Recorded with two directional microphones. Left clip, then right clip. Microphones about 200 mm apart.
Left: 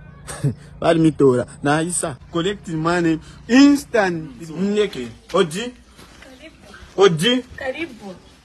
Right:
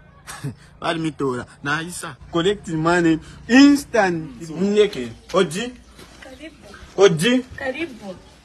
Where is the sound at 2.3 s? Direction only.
25° left (ahead or behind).